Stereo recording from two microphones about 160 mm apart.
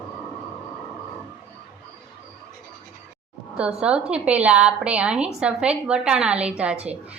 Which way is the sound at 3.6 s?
5° right (ahead or behind).